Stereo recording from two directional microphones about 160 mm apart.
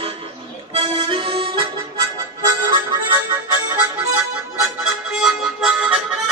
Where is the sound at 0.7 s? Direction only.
35° right (ahead or behind).